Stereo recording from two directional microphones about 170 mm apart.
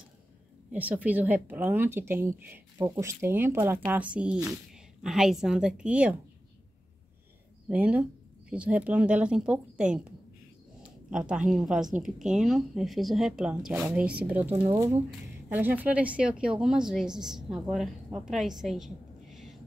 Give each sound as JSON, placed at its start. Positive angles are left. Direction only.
{"t": 0.7, "sound": "a woman's voice", "side_deg": -10}
{"t": 7.6, "sound": "speech", "side_deg": -10}
{"t": 11.1, "sound": "a woman's voice", "side_deg": -5}
{"t": 15.5, "sound": "a woman's voice", "side_deg": -10}
{"t": 18.6, "sound": "a sound", "side_deg": 0}